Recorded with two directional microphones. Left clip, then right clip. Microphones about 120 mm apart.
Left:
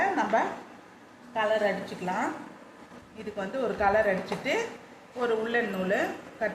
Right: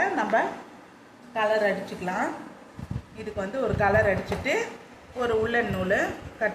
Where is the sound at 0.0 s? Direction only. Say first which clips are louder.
Right 2 dB; 15° right (ahead or behind).